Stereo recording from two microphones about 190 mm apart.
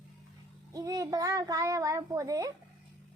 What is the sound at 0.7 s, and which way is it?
A child's voice, 20° right (ahead or behind).